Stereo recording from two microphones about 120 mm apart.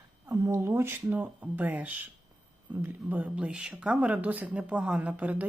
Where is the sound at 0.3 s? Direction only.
25° right (ahead or behind).